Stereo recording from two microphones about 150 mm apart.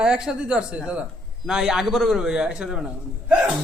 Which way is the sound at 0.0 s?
5° right (ahead or behind).